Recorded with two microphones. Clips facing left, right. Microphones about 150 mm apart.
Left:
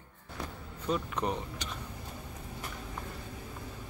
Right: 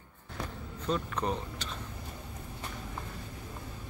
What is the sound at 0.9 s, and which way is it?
Speech, 15° left (ahead or behind).